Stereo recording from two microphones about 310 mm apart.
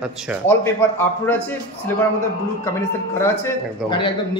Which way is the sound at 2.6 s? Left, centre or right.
Centre.